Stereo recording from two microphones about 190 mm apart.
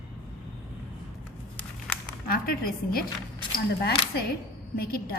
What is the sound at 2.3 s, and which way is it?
Speech, 50° left (ahead or behind).